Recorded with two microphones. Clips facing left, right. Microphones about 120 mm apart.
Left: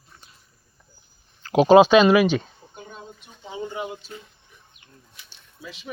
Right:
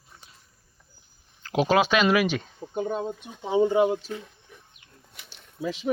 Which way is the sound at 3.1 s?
65° right (ahead or behind).